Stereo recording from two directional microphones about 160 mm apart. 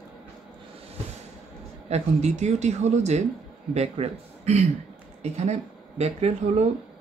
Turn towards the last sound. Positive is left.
turn(degrees=-40)  # may be behind; listen again after turning